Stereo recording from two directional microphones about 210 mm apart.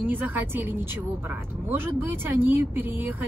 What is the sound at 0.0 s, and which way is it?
Speech, 10° right (ahead or behind).